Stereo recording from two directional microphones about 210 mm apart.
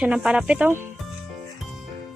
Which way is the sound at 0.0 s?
5° right (ahead or behind).